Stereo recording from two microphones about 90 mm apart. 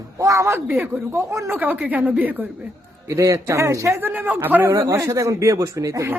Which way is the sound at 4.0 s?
20° right (ahead or behind).